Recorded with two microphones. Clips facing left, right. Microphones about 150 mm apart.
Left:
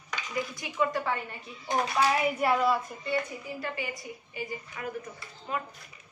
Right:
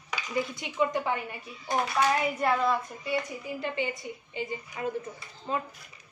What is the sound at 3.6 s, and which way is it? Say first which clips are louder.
A woman's voice: right 5 dB; 25° right (ahead or behind).